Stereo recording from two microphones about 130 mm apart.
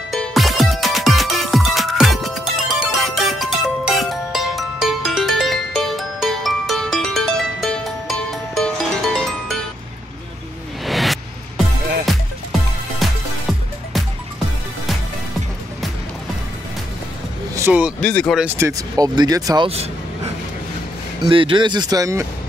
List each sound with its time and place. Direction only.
0.1 s music: centre (ahead or behind)
10.9 s a sound: centre (ahead or behind)
12.1 s music: centre (ahead or behind)
17.6 s vehicle: 15° right (ahead or behind)
18.0 s speech: 5° left (ahead or behind)
18.4 s speech: 15° right (ahead or behind)
18.7 s speech: 30° right (ahead or behind)
19.6 s speech: 50° right (ahead or behind)
21.2 s speech: 40° right (ahead or behind)